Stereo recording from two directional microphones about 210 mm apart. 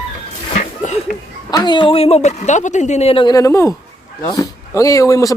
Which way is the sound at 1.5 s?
20° left (ahead or behind).